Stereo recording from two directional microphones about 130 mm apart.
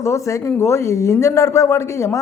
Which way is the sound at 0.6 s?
20° left (ahead or behind).